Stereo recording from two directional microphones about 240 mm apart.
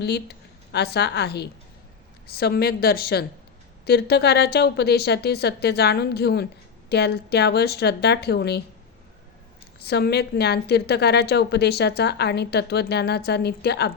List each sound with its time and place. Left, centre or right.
0.0 s a woman's voice: left
9.8 s a woman's voice: left